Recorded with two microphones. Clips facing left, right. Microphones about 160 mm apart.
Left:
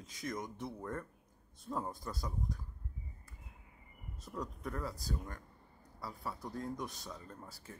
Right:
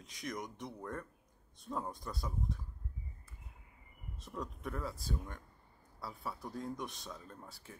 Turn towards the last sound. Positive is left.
turn(degrees=0)  # may be behind; listen again after turning